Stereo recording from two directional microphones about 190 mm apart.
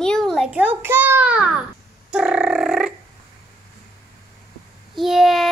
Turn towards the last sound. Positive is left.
turn(degrees=0)  # may be behind; listen again after turning